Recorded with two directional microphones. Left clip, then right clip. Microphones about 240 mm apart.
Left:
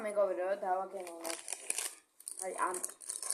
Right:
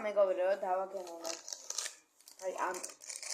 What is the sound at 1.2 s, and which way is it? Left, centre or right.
Crumpling, left.